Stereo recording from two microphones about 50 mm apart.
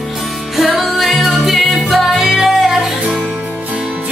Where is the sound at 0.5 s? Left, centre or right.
Centre.